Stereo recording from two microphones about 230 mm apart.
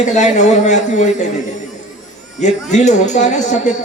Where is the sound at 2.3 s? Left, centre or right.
Left.